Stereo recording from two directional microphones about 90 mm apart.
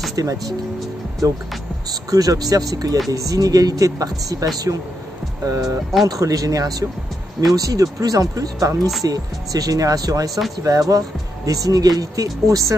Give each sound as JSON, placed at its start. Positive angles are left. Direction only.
{"t": 0.1, "sound": "speech", "side_deg": -40}
{"t": 1.9, "sound": "speech", "side_deg": -45}